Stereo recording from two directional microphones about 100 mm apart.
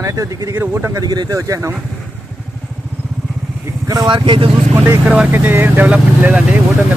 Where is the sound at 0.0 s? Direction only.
35° right (ahead or behind).